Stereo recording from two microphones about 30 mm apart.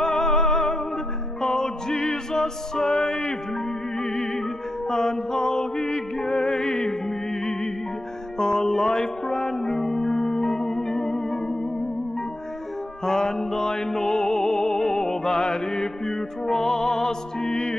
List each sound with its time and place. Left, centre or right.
0.0 s music: left
2.9 s music: left
4.0 s music: centre
6.3 s music: left; by 10.1 s centre
10.1 s music: left
13.0 s music: centre
15.2 s mantra: left
16.1 s music: centre